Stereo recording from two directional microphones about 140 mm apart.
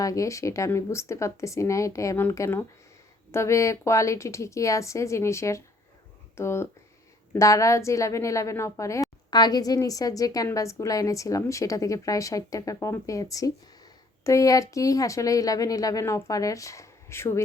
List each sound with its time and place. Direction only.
0.0 s a woman's voice: 25° left (ahead or behind)